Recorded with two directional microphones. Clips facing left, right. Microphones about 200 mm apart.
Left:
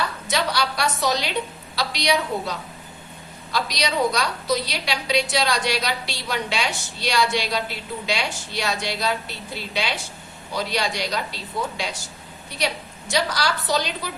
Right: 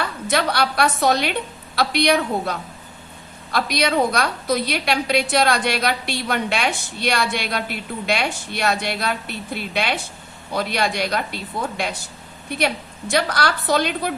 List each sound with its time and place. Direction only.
0.0 s a woman's voice: 55° right (ahead or behind)